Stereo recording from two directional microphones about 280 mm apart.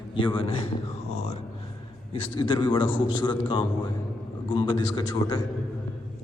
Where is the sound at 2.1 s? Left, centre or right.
Centre.